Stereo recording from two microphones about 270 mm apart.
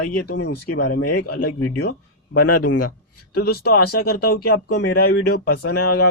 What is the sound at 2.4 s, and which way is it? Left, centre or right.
Speech, left.